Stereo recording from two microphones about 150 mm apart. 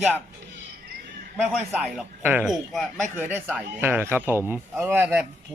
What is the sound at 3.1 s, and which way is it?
Speech, 15° right (ahead or behind).